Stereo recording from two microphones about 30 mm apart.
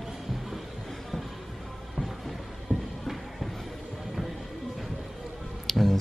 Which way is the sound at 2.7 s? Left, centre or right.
Right.